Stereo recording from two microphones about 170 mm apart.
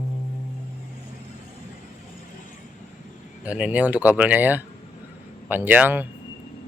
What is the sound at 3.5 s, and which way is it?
Speech, 5° right (ahead or behind).